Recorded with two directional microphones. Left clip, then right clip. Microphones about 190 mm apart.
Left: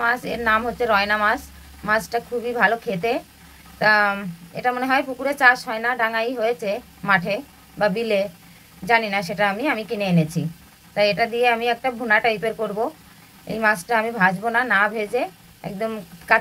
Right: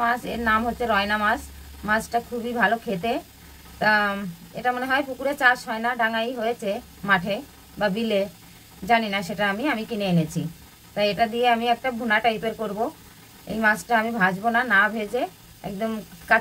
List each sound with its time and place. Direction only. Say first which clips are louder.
0.0 s a woman's voice: left 2 dB; 25° left (ahead or behind)